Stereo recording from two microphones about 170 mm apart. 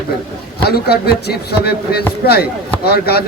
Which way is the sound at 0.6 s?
70° left (ahead or behind).